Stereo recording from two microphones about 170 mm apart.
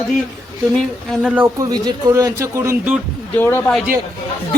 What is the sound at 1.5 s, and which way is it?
Speech, 25° right (ahead or behind).